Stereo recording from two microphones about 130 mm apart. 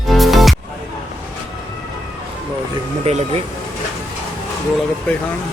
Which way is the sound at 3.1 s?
55° right (ahead or behind).